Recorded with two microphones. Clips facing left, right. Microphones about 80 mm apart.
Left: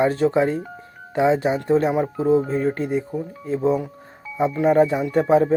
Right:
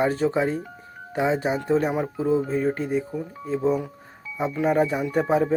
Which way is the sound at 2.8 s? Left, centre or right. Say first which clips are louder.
Left 2 dB; left.